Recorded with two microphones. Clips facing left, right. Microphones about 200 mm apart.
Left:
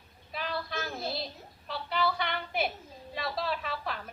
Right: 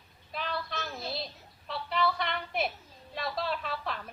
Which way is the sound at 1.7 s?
Centre (ahead or behind).